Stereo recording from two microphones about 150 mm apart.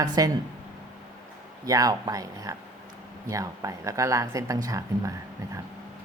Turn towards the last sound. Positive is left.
turn(degrees=-20)  # may be behind; listen again after turning